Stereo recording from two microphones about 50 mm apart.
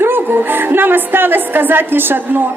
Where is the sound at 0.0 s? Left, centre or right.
Right.